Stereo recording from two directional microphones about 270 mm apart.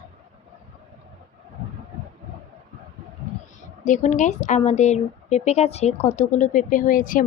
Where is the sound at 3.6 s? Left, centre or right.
Left.